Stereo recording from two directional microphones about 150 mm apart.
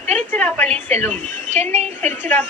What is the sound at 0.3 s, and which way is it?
A woman's voice, 10° left (ahead or behind).